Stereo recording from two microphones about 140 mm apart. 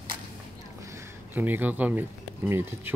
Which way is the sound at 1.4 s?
15° right (ahead or behind).